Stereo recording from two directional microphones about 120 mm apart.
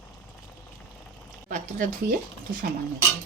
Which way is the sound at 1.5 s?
90° right.